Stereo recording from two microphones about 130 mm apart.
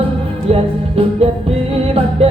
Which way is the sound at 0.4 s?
50° right (ahead or behind).